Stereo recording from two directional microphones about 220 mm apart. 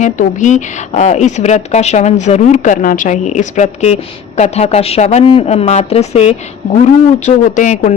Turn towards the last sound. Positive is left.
turn(degrees=35)  # may be behind; listen again after turning